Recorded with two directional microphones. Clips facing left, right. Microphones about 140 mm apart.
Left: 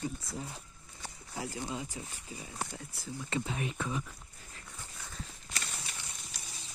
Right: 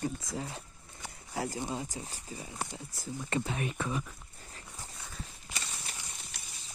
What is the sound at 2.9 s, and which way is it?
Speech, 45° right (ahead or behind).